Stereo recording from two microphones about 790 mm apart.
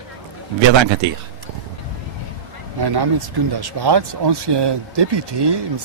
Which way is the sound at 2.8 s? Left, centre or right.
Right.